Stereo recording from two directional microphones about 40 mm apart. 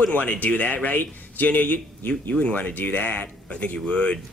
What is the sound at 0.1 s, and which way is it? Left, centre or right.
A man's voice, left.